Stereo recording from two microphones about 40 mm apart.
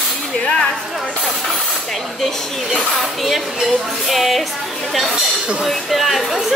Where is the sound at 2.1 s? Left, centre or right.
Centre.